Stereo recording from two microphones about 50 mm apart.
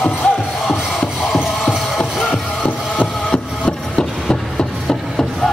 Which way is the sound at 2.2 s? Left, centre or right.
Left.